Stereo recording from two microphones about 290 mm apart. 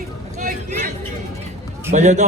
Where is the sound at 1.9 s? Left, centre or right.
Right.